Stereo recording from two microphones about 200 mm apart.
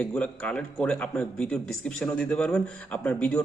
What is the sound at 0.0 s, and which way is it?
A man's voice, 5° left (ahead or behind).